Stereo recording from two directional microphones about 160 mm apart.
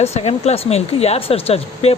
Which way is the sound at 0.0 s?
40° left (ahead or behind).